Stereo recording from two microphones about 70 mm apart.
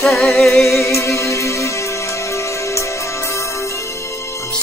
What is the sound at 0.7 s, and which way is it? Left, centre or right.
Music, left.